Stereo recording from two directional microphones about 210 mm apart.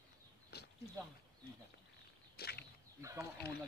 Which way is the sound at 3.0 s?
15° right (ahead or behind).